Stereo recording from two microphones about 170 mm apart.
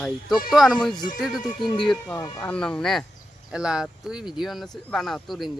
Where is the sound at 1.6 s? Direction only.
30° left (ahead or behind).